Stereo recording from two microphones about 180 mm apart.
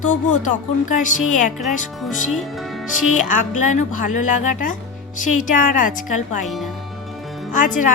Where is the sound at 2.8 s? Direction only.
45° left (ahead or behind).